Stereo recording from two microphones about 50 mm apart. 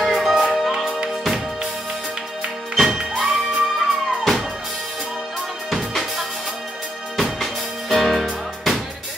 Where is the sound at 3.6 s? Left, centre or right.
Centre.